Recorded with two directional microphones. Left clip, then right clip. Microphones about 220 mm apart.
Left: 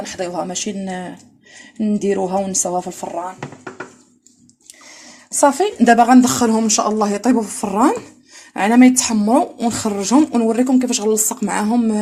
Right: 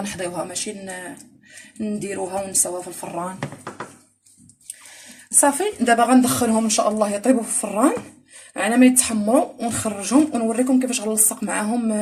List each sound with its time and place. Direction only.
0.2 s speech: 35° left (ahead or behind)
5.4 s speech: 35° left (ahead or behind)